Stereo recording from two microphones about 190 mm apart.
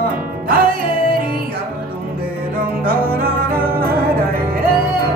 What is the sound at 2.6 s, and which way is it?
Music, 50° right (ahead or behind).